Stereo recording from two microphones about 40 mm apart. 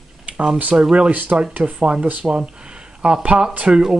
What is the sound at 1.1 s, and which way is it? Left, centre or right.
Speech, right.